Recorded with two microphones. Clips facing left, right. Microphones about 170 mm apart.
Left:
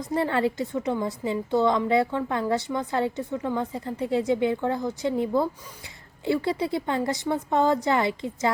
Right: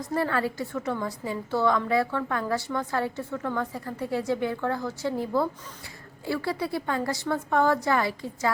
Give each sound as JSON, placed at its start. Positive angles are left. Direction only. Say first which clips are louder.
{"t": 0.1, "sound": "a woman's voice", "louder": "left 3 dB", "side_deg": 25}